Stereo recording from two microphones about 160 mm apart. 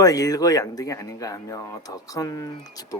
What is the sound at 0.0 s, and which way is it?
A man's voice, 20° left (ahead or behind).